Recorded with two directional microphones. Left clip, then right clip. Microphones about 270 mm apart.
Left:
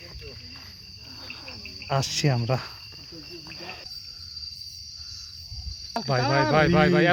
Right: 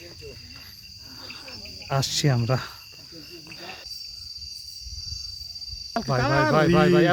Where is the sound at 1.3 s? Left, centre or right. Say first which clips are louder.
Even; centre.